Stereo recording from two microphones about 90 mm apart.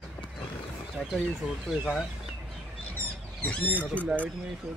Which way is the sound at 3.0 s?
15° left (ahead or behind).